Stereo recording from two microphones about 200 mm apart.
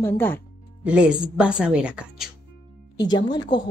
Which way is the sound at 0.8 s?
5° right (ahead or behind).